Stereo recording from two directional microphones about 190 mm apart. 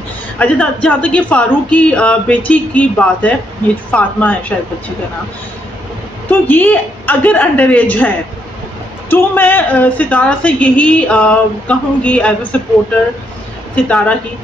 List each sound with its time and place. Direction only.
0.4 s a woman's voice: 5° left (ahead or behind)
6.4 s a woman's voice: 10° left (ahead or behind)
9.1 s a woman's voice: 10° left (ahead or behind)
13.8 s a woman's voice: 5° left (ahead or behind)